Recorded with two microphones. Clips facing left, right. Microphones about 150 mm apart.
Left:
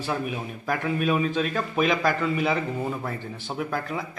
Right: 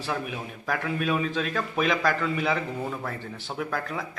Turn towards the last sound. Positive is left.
turn(degrees=5)  # may be behind; listen again after turning